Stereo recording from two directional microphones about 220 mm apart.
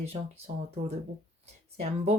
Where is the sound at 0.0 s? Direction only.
30° right (ahead or behind).